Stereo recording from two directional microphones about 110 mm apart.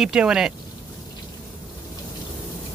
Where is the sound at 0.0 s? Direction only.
5° right (ahead or behind).